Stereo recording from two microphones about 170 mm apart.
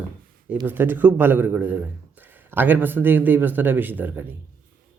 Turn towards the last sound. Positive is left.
turn(degrees=-10)  # may be behind; listen again after turning